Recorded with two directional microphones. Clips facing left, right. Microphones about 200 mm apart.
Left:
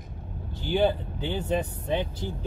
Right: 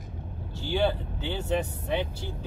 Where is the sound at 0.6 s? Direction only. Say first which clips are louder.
Left 2 dB; 20° left (ahead or behind).